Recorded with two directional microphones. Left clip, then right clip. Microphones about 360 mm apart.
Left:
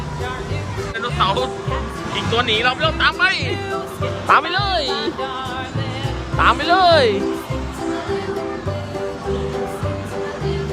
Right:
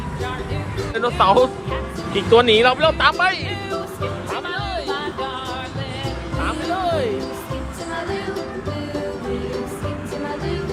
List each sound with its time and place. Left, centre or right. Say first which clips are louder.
0.9 s speech: right 4 dB; centre
4.4 s speech: left 8 dB; left
4.9 s music: left 2 dB; centre
6.4 s music: left 9 dB; left